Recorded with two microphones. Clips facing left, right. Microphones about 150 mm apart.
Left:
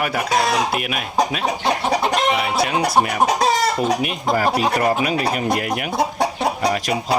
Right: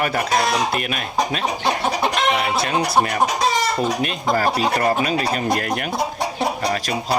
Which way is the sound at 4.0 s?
15° left (ahead or behind).